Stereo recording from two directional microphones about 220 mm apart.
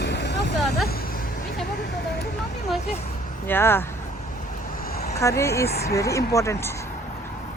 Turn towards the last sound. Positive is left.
turn(degrees=10)  # may be behind; listen again after turning